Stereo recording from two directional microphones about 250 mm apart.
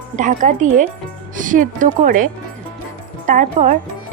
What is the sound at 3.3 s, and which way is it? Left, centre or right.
Speech, right.